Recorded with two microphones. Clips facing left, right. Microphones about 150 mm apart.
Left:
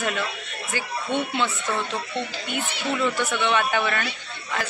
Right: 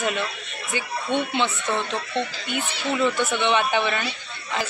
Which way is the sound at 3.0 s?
20° right (ahead or behind).